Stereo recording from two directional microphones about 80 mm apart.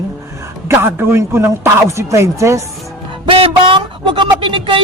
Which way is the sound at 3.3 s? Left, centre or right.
Right.